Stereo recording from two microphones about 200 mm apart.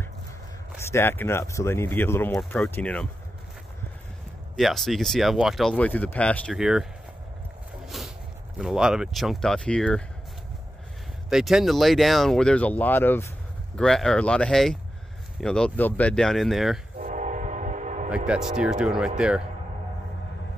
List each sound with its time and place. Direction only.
0.8 s speech: 10° left (ahead or behind)
4.6 s speech: centre (ahead or behind)
7.8 s vehicle: centre (ahead or behind)
8.5 s speech: 5° right (ahead or behind)
11.2 s speech: centre (ahead or behind)
17.0 s train: 40° right (ahead or behind)
18.1 s speech: 5° right (ahead or behind)